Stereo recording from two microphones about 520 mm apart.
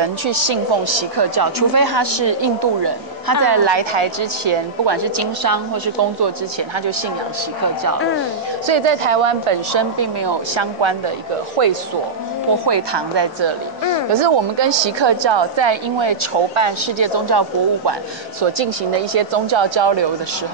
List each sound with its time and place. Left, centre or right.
0.0 s a woman's voice: right
4.9 s speech: right
8.6 s a woman's voice: right
9.9 s a woman's voice: right
11.6 s a woman's voice: right
12.6 s a woman's voice: right
18.4 s a woman's voice: right